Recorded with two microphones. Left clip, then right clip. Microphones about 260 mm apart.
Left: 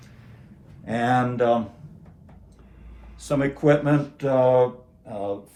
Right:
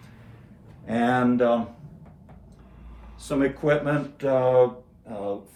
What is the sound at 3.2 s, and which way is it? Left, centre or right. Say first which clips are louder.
Speech: left 3 dB; left.